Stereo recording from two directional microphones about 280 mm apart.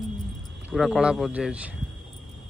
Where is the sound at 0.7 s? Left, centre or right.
Centre.